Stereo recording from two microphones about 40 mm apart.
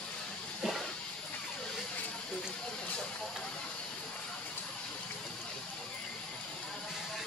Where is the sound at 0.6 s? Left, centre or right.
Centre.